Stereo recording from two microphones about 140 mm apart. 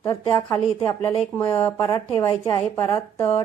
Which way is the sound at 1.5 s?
15° left (ahead or behind).